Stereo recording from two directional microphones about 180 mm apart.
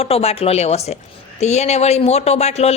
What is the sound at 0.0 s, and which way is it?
A woman's voice, 35° left (ahead or behind).